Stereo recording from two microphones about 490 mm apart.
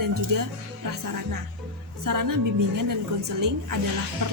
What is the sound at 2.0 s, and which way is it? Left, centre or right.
A woman's voice, right.